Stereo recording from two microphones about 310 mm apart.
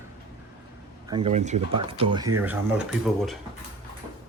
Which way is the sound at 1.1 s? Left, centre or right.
Centre.